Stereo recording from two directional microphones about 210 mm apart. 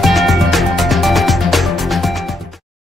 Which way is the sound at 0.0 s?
Centre (ahead or behind).